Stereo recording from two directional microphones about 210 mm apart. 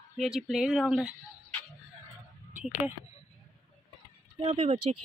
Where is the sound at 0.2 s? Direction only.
Centre (ahead or behind).